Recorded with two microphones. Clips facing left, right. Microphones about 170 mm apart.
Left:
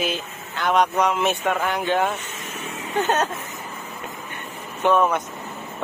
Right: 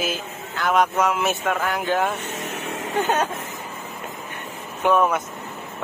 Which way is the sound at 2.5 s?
70° right (ahead or behind).